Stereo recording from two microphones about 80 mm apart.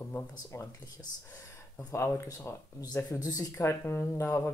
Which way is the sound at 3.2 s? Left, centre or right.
Left.